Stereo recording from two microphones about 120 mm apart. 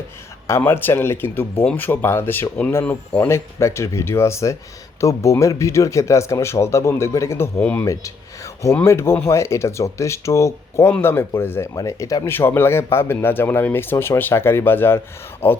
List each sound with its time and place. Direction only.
0.4 s speech: 20° left (ahead or behind)